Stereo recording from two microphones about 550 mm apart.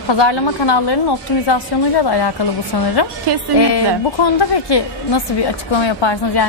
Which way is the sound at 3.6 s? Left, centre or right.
Left.